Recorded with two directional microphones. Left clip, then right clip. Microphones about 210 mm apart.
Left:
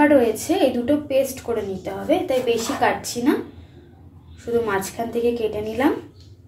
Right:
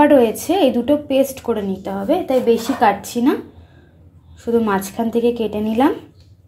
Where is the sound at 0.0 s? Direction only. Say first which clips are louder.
Right 4 dB; 50° right (ahead or behind).